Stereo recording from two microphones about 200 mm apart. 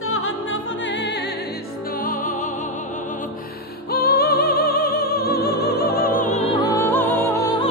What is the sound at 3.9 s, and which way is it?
Music, 50° left (ahead or behind).